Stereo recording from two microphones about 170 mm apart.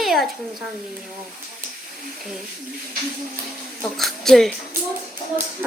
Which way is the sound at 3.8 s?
Centre (ahead or behind).